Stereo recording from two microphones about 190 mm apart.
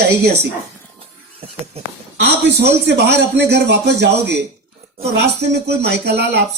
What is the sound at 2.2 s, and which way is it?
Speech, 65° right (ahead or behind).